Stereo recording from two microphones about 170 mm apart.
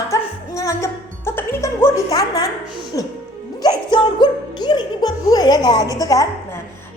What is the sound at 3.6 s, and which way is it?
Music, 25° left (ahead or behind).